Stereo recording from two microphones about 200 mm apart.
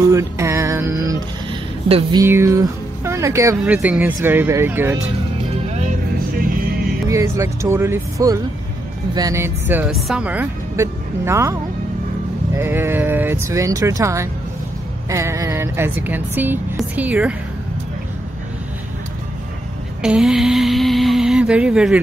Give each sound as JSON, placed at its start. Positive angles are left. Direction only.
{"t": 0.0, "sound": "music", "side_deg": -15}
{"t": 1.5, "sound": "speech", "side_deg": -25}
{"t": 5.7, "sound": "music", "side_deg": -35}
{"t": 6.1, "sound": "music", "side_deg": -45}
{"t": 7.1, "sound": "speech", "side_deg": -15}
{"t": 12.5, "sound": "speech", "side_deg": -10}
{"t": 20.0, "sound": "speech", "side_deg": -5}